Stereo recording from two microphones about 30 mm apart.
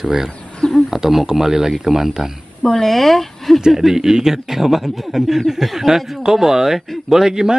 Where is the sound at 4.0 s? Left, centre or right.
Centre.